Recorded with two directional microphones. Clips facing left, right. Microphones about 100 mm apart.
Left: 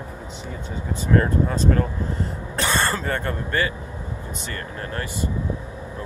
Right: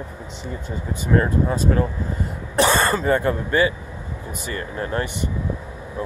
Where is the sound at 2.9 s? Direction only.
10° right (ahead or behind).